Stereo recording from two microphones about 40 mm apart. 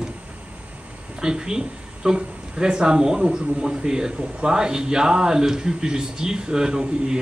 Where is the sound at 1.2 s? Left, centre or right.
Centre.